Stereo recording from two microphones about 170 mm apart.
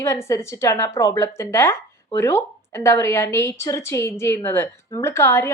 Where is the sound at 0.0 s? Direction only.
15° left (ahead or behind).